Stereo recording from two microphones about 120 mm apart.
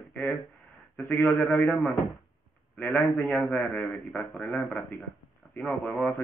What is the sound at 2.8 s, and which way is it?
A man's voice, 20° left (ahead or behind).